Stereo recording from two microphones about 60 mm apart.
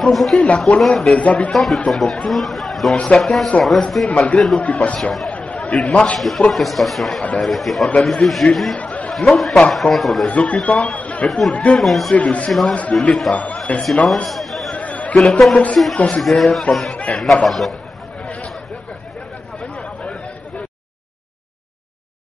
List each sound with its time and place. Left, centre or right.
0.0 s speech: centre
4.6 s speech: centre
4.9 s speech: centre
11.0 s chatter: left
11.2 s speech: centre
12.2 s speech: centre
12.4 s speech: centre
13.7 s speech: left
14.0 s a sound: centre
14.8 s music: left
15.1 s speech: centre
18.2 s chatter: centre